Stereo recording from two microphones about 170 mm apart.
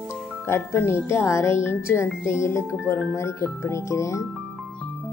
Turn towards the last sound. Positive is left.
turn(degrees=15)  # may be behind; listen again after turning